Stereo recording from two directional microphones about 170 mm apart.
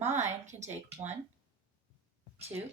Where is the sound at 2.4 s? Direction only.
35° right (ahead or behind).